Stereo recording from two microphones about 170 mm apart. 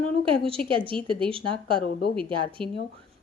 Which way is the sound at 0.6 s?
30° right (ahead or behind).